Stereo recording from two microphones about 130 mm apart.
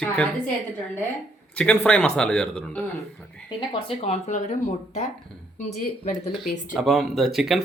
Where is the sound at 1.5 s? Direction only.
10° left (ahead or behind).